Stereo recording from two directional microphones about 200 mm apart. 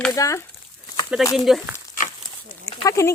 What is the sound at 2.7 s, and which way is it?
Speech, 15° left (ahead or behind).